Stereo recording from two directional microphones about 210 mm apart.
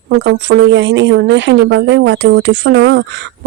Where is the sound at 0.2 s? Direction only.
60° right (ahead or behind).